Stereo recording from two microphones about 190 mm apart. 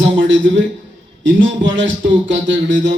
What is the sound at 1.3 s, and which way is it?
A man's voice, 80° right.